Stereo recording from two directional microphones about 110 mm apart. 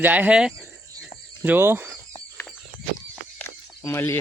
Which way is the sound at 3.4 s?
25° left (ahead or behind).